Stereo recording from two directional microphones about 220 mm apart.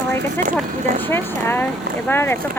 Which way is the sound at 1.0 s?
10° left (ahead or behind).